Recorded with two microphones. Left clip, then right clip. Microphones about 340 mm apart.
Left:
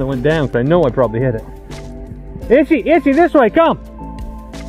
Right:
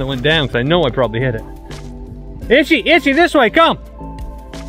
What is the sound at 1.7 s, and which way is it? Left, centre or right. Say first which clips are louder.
Music: left 1 dB; centre.